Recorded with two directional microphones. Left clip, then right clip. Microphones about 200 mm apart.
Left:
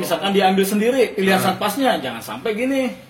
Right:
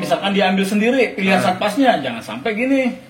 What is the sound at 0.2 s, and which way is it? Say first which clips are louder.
Speech: left 1 dB; 45° left (ahead or behind).